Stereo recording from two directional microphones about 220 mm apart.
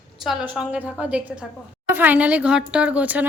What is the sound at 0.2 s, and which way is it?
Speech, 5° right (ahead or behind).